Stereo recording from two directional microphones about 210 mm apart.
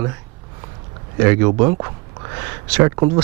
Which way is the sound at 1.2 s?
10° right (ahead or behind).